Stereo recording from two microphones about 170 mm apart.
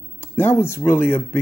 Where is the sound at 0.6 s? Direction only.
15° left (ahead or behind).